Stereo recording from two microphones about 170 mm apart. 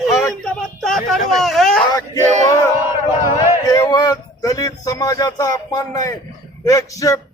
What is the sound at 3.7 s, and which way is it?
A man's voice, 25° left (ahead or behind).